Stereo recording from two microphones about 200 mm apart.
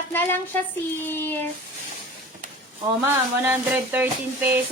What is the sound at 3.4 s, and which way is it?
A woman's voice, 10° right (ahead or behind).